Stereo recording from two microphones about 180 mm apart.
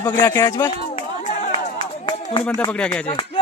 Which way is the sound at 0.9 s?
35° left (ahead or behind).